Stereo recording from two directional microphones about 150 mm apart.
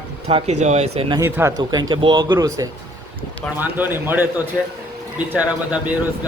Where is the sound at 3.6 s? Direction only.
10° right (ahead or behind).